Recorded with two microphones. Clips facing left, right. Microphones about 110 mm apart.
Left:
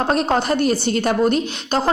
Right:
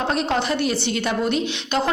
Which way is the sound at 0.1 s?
45° left (ahead or behind).